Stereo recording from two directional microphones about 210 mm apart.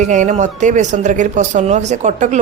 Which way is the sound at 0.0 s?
35° right (ahead or behind).